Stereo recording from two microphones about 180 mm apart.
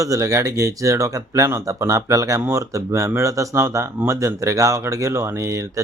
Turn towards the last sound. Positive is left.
turn(degrees=-15)  # may be behind; listen again after turning